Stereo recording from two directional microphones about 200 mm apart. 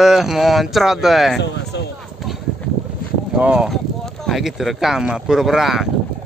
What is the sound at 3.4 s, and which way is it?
Speech, 5° right (ahead or behind).